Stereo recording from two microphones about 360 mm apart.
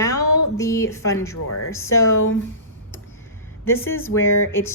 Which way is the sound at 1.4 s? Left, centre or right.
Left.